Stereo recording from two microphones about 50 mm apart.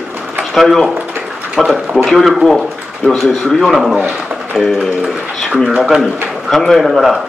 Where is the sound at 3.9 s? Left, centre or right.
Right.